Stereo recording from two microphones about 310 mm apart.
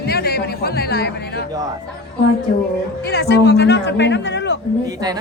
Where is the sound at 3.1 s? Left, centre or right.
Left.